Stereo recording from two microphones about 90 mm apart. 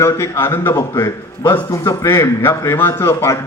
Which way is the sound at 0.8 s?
40° left (ahead or behind).